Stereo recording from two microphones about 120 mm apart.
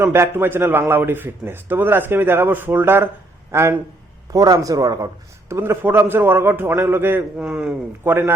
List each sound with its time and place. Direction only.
0.0 s a man's voice: 20° right (ahead or behind)
4.3 s a man's voice: 30° right (ahead or behind); by 7.8 s 5° right (ahead or behind)
8.0 s a man's voice: 15° right (ahead or behind)